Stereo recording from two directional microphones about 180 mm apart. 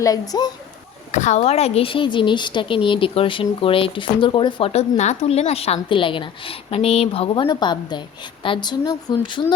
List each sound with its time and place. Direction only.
0.0 s speech: 20° left (ahead or behind)
1.1 s speech: 40° left (ahead or behind)